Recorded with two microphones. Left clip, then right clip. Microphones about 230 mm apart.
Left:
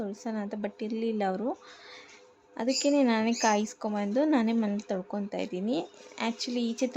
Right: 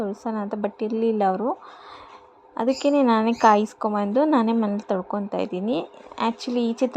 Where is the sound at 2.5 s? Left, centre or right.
Centre.